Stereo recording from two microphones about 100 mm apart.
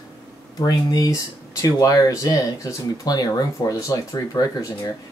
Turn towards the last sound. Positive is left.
turn(degrees=35)  # may be behind; listen again after turning